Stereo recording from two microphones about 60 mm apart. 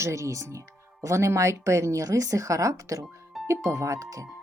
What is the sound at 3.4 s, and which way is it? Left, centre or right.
Speech, right.